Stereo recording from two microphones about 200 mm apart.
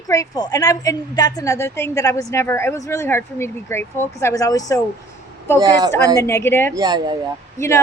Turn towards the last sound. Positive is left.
turn(degrees=15)  # may be behind; listen again after turning